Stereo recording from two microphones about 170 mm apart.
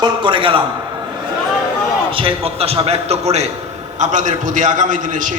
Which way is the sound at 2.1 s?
35° right (ahead or behind).